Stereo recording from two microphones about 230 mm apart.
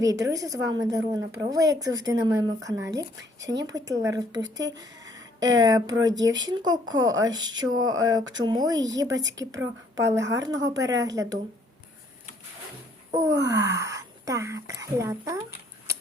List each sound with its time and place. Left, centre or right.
0.0 s a woman's voice: centre
4.4 s speech: right
5.6 s a woman's voice: centre
13.1 s speech: centre